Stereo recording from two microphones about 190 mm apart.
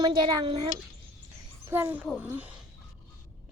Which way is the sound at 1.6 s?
10° right (ahead or behind).